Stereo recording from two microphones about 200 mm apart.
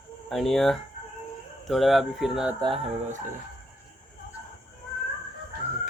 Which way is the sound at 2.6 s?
25° right (ahead or behind).